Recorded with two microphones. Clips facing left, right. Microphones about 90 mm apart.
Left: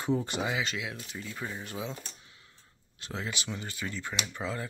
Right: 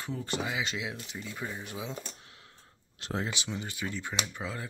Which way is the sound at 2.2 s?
65° right (ahead or behind).